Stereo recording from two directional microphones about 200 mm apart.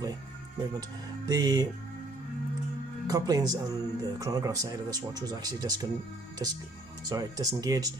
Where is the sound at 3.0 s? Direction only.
20° right (ahead or behind).